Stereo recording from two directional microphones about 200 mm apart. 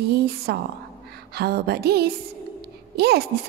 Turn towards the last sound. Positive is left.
turn(degrees=-55)  # may be behind; listen again after turning